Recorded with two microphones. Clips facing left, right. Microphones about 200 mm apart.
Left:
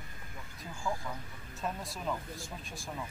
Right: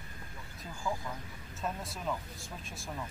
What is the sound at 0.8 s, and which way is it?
Speech, centre (ahead or behind).